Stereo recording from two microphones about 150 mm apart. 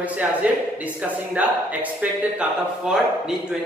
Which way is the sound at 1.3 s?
10° right (ahead or behind).